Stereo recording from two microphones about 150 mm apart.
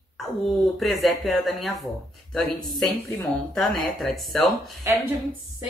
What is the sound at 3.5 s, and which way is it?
Speech, centre (ahead or behind).